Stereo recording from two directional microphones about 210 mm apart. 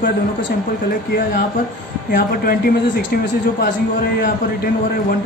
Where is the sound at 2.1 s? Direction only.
45° left (ahead or behind).